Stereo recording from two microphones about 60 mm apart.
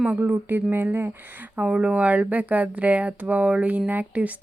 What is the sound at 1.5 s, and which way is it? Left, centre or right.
Speech, right.